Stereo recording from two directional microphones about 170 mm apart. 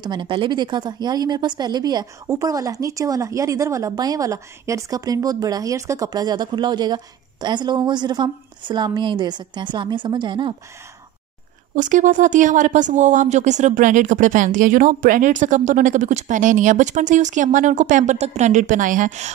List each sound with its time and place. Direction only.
0.0 s a woman's voice: 25° right (ahead or behind)
11.7 s speech: 45° right (ahead or behind)